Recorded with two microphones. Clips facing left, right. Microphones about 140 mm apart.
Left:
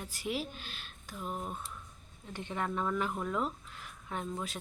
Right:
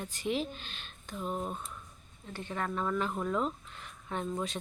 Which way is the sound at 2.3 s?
15° left (ahead or behind).